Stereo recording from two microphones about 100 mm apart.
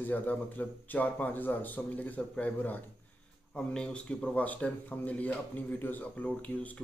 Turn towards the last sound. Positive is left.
turn(degrees=15)  # may be behind; listen again after turning